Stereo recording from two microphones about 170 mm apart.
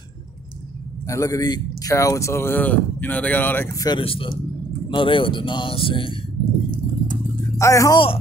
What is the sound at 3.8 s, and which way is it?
Speech, 30° left (ahead or behind).